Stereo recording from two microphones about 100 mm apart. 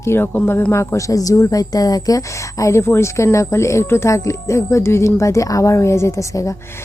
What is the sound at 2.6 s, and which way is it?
A woman's voice, 25° left (ahead or behind).